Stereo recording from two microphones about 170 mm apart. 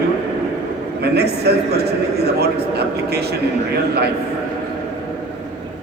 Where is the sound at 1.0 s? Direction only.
70° right (ahead or behind).